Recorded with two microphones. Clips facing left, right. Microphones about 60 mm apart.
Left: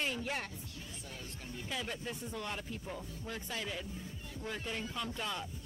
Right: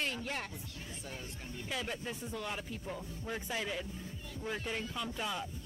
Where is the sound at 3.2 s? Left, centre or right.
Centre.